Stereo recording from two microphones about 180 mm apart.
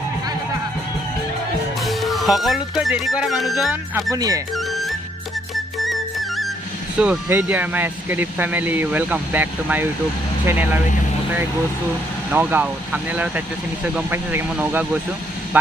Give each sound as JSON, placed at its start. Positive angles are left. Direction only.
{"t": 1.8, "sound": "speech", "side_deg": 0}
{"t": 4.1, "sound": "speech", "side_deg": -20}
{"t": 4.6, "sound": "music", "side_deg": 0}
{"t": 7.0, "sound": "speech", "side_deg": -10}
{"t": 12.3, "sound": "speech", "side_deg": -10}